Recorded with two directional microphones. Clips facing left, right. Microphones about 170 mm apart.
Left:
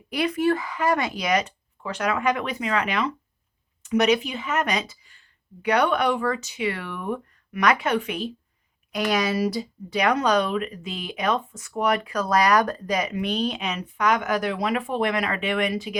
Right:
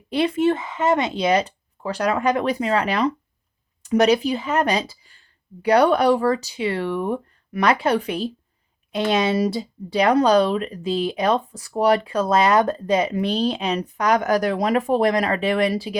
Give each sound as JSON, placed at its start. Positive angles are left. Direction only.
{"t": 0.1, "sound": "speech", "side_deg": -30}